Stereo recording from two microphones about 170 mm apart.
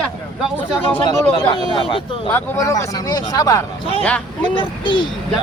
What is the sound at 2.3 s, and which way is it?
Speech, 15° left (ahead or behind).